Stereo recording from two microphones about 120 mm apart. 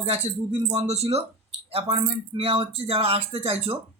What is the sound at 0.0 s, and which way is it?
Speech, 65° right (ahead or behind).